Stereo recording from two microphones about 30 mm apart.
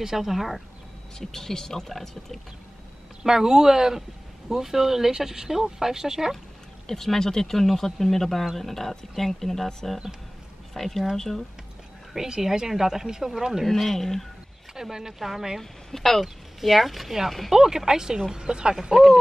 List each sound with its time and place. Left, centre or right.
0.0 s speech: centre
1.2 s speech: centre
3.3 s speech: centre
6.9 s speech: centre
10.7 s speech: centre
12.2 s speech: centre
13.7 s speech: centre
14.8 s speech: centre
15.9 s speech: centre
17.5 s speech: centre